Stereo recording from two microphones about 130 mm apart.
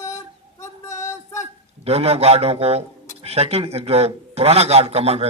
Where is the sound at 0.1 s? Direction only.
20° left (ahead or behind).